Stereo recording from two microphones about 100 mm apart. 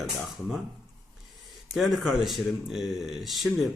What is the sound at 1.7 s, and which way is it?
Speech, centre (ahead or behind).